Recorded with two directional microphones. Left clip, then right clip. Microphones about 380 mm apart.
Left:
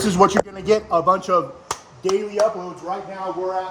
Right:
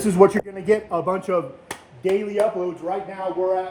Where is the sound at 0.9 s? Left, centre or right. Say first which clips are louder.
Left 5 dB; centre.